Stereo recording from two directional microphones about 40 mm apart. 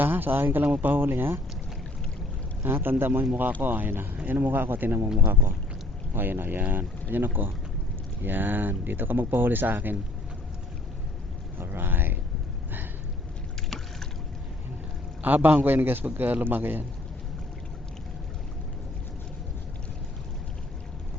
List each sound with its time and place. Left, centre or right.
0.0 s speech: right
2.6 s speech: right
11.5 s speech: right
15.2 s speech: right